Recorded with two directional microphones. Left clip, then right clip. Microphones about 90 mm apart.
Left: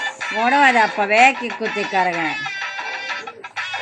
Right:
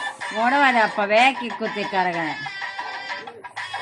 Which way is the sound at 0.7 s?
35° right (ahead or behind).